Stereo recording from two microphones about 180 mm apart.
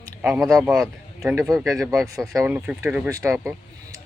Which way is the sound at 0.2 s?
10° right (ahead or behind).